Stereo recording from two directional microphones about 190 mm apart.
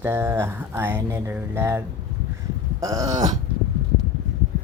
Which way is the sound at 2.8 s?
20° right (ahead or behind).